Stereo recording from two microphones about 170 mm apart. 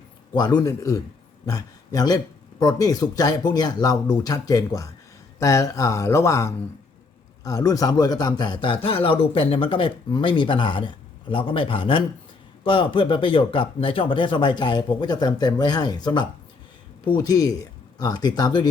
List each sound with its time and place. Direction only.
0.3 s a man's voice: 25° left (ahead or behind)